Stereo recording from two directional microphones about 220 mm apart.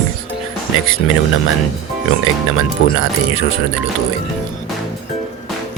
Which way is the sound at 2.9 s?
65° left (ahead or behind).